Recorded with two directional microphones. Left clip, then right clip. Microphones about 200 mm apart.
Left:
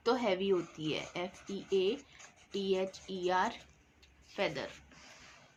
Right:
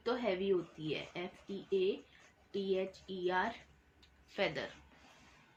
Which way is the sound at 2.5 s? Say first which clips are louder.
Left 3 dB; 30° left (ahead or behind).